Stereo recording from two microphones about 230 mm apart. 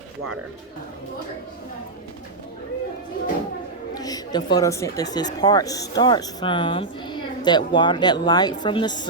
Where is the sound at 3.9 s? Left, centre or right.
Centre.